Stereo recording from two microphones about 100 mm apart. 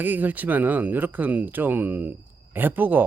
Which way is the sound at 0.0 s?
15° right (ahead or behind).